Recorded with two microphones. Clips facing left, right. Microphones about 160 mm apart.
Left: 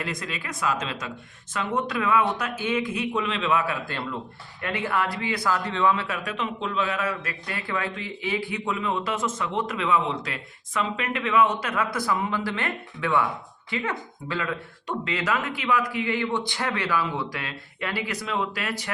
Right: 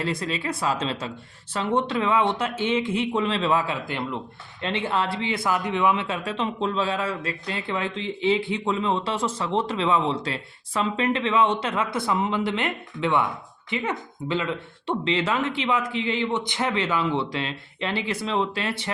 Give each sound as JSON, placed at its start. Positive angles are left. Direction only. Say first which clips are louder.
{"t": 0.0, "sound": "speech", "louder": "right 5 dB", "side_deg": -30}
{"t": 3.8, "sound": "speech", "louder": "right 2 dB", "side_deg": -20}